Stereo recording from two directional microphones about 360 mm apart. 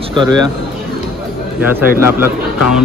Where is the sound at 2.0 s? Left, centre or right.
Centre.